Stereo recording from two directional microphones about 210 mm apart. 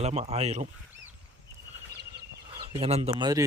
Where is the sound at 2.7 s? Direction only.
30° right (ahead or behind).